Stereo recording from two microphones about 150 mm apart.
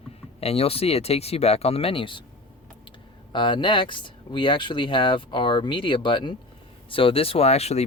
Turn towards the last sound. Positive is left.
turn(degrees=45)  # may be behind; listen again after turning